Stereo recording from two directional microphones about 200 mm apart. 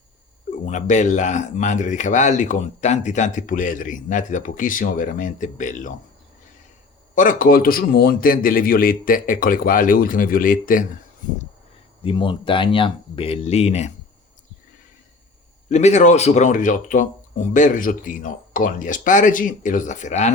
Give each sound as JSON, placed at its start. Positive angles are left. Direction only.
{"t": 0.6, "sound": "speech", "side_deg": 35}
{"t": 7.2, "sound": "a man's voice", "side_deg": 40}
{"t": 12.0, "sound": "speech", "side_deg": 25}
{"t": 15.7, "sound": "speech", "side_deg": 35}